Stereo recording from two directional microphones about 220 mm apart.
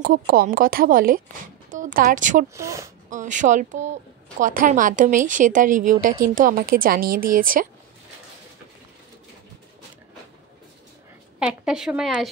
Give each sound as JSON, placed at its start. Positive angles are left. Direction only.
{"t": 0.0, "sound": "a woman's voice", "side_deg": -40}
{"t": 2.5, "sound": "speech", "side_deg": -15}
{"t": 3.1, "sound": "speech", "side_deg": -35}
{"t": 11.3, "sound": "a woman's voice", "side_deg": -5}